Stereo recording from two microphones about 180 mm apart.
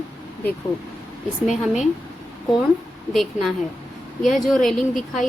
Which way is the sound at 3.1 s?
Centre (ahead or behind).